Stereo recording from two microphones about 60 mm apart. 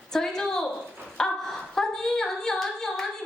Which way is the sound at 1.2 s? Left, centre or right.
Centre.